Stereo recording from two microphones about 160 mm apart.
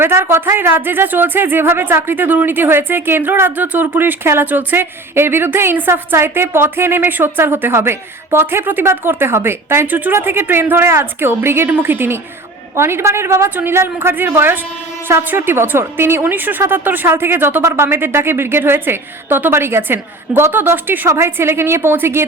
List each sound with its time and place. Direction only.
0.0 s speech: 15° right (ahead or behind)